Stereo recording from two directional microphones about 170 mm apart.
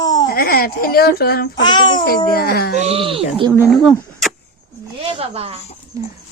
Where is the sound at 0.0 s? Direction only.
20° left (ahead or behind).